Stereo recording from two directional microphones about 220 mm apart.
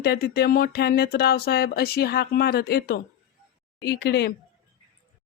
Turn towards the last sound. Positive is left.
turn(degrees=50)  # may be behind; listen again after turning